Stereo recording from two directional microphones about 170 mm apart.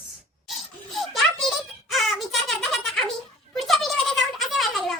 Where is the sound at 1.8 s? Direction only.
Centre (ahead or behind).